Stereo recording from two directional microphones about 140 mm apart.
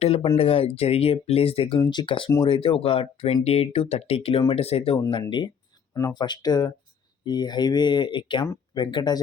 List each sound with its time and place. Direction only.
0.0 s speech: 45° left (ahead or behind)
1.8 s speech: 35° left (ahead or behind)
4.9 s speech: 30° left (ahead or behind)